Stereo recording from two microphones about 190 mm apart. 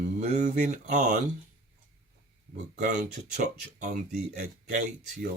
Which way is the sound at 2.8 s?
45° right (ahead or behind).